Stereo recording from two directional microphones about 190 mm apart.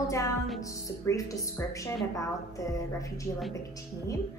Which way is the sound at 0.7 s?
15° left (ahead or behind).